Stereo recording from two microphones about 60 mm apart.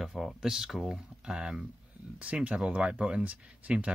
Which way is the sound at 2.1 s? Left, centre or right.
Right.